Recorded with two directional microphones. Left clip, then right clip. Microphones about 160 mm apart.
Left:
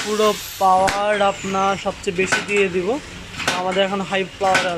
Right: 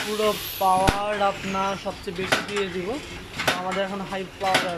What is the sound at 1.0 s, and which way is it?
Speech, centre (ahead or behind).